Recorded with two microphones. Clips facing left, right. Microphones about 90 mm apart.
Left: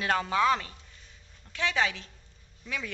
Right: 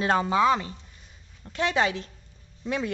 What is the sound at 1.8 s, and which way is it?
A woman's voice, 40° right (ahead or behind).